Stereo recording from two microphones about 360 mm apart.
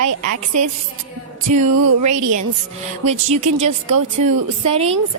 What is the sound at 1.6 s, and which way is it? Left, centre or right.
Speech, right.